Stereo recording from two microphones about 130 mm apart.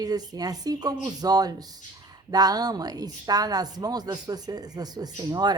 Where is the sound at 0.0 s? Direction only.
30° right (ahead or behind).